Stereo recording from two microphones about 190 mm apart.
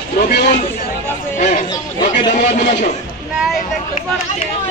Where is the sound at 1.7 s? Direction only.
25° left (ahead or behind).